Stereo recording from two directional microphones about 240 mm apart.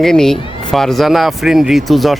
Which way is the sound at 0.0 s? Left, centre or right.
Centre.